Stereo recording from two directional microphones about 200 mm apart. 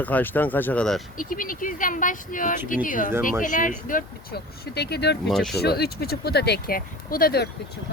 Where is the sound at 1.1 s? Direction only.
45° left (ahead or behind).